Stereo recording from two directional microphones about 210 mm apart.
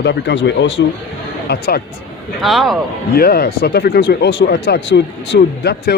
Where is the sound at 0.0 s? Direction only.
55° left (ahead or behind).